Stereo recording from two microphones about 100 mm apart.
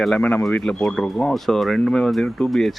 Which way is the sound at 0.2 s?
20° left (ahead or behind).